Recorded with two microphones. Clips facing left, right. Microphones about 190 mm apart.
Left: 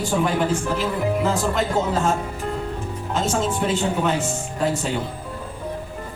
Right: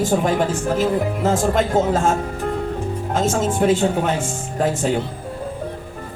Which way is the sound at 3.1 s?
50° right (ahead or behind).